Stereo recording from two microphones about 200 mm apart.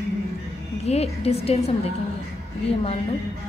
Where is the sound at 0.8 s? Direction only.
30° left (ahead or behind).